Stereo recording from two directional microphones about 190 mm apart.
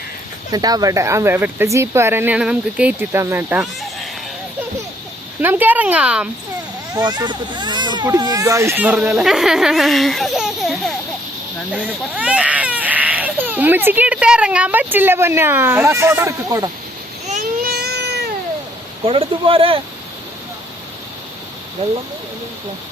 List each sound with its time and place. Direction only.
0.5 s speech: 20° right (ahead or behind)
5.4 s speech: 10° right (ahead or behind)
6.9 s speech: 20° right (ahead or behind)
17.2 s a sound: 45° right (ahead or behind)
19.0 s speech: 30° right (ahead or behind)